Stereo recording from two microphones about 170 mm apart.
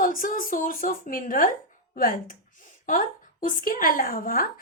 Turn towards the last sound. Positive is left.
turn(degrees=55)  # may be behind; listen again after turning